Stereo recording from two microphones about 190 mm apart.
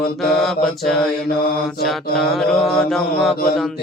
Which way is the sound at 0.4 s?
5° left (ahead or behind).